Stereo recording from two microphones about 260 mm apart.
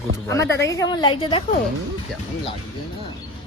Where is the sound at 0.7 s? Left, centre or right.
Centre.